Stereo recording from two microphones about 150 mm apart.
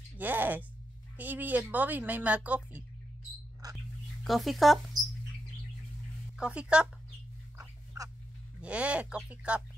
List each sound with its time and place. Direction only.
0.2 s speech: 10° right (ahead or behind)
3.7 s mouse: centre (ahead or behind)
6.3 s speech: 5° right (ahead or behind)
7.5 s dog: 20° right (ahead or behind)
8.5 s speech: 10° right (ahead or behind)